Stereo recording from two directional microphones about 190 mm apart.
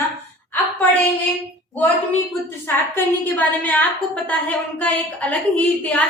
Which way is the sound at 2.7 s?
10° left (ahead or behind).